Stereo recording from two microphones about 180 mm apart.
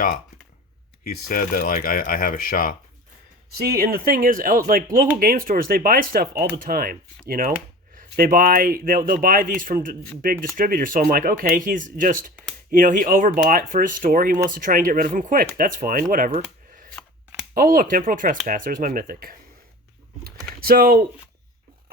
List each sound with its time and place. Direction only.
1.0 s speech: 50° left (ahead or behind)
3.6 s speech: 55° right (ahead or behind)
17.5 s speech: 50° right (ahead or behind)
20.2 s typing: 55° right (ahead or behind)